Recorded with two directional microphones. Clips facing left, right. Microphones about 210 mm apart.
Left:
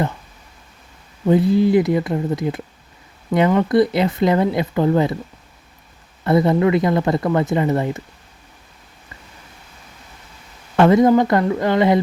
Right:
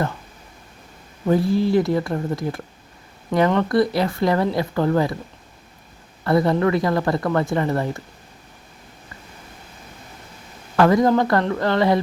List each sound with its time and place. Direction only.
1.3 s speech: 20° left (ahead or behind)
6.2 s speech: 20° left (ahead or behind)
10.8 s speech: 20° left (ahead or behind)